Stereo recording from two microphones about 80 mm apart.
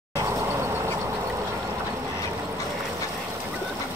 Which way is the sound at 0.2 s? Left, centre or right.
Right.